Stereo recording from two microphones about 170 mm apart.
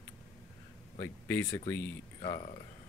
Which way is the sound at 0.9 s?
10° left (ahead or behind).